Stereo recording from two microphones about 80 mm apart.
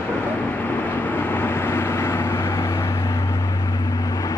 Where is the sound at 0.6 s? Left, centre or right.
Left.